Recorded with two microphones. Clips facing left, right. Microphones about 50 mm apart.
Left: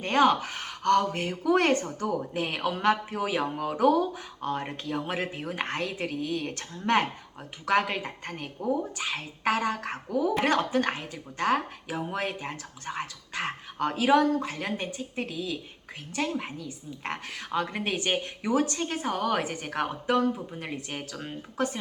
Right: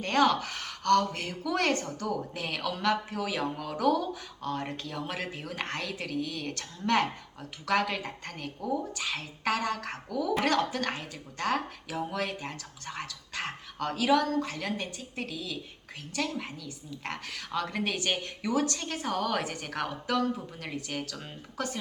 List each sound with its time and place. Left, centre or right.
0.0 s speech: left